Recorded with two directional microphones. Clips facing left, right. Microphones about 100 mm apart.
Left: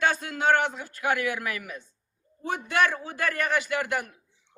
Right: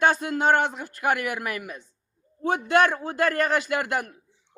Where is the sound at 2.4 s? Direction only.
55° right (ahead or behind).